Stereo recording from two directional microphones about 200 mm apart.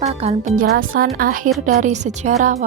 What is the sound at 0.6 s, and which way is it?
Speech, 45° right (ahead or behind).